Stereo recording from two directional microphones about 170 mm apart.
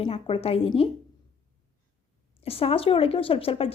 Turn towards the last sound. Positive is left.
turn(degrees=35)  # may be behind; listen again after turning